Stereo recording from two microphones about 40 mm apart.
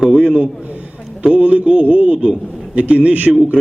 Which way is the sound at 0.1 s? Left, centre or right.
Right.